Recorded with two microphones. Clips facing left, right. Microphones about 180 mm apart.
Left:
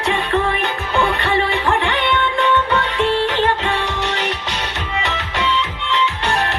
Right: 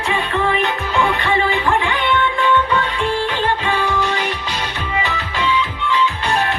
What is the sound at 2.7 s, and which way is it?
Music, 75° left (ahead or behind).